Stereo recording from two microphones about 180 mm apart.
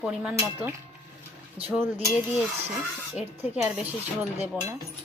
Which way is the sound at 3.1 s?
10° right (ahead or behind).